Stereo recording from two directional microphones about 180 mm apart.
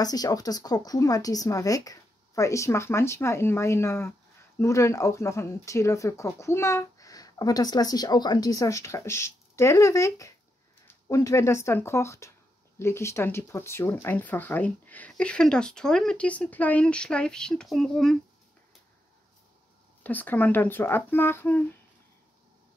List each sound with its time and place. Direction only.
0.0 s speech: 20° left (ahead or behind); by 18.1 s centre (ahead or behind)
20.0 s speech: 10° left (ahead or behind)